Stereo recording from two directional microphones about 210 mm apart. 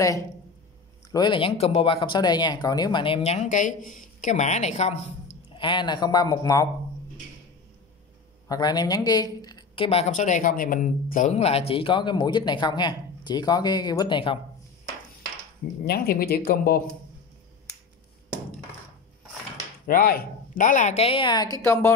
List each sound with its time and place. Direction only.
1.1 s speech: 20° left (ahead or behind)
5.5 s speech: 20° left (ahead or behind)
8.5 s speech: 20° left (ahead or behind)
15.8 s speech: 45° left (ahead or behind)
19.9 s speech: 45° left (ahead or behind); by 21.5 s 20° left (ahead or behind)